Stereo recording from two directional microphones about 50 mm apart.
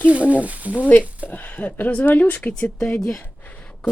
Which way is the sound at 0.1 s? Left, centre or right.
Right.